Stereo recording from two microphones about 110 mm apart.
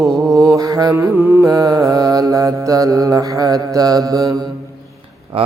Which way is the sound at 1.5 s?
35° right (ahead or behind).